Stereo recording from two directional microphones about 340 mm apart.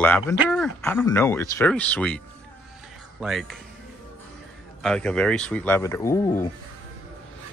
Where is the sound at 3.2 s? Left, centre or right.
Centre.